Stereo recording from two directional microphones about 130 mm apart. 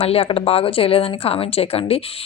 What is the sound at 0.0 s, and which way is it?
A woman's voice, 50° left (ahead or behind).